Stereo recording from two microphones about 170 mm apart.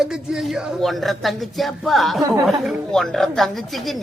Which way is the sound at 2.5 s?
Centre (ahead or behind).